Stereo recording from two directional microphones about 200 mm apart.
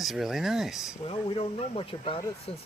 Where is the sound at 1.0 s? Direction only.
25° left (ahead or behind).